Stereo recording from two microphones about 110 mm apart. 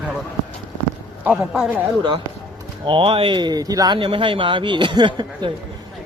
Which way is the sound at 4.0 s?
50° right (ahead or behind).